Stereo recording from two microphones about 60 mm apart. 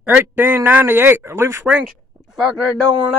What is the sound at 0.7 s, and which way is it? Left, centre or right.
Speech, right.